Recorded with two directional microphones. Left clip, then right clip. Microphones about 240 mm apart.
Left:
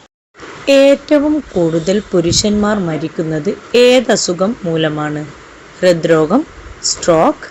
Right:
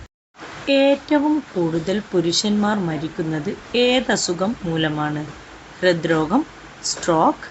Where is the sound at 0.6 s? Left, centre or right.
Centre.